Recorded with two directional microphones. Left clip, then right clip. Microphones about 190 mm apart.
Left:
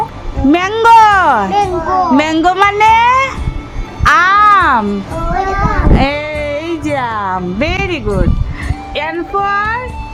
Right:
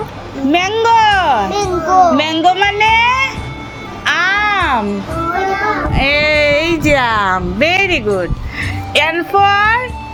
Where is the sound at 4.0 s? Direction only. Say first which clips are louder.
Left 5 dB; 30° left (ahead or behind).